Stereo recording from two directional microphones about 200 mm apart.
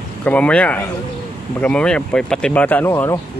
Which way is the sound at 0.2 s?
5° left (ahead or behind).